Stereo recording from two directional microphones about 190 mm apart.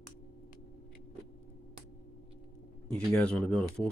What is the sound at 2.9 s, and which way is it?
Speech, 5° left (ahead or behind).